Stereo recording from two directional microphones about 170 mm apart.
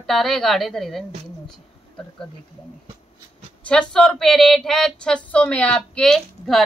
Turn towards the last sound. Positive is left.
turn(degrees=0)  # may be behind; listen again after turning